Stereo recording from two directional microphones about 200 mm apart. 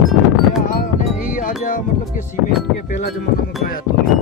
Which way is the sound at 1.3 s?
40° left (ahead or behind).